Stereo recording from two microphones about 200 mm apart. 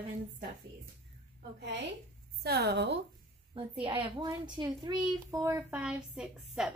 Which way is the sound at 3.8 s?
25° right (ahead or behind).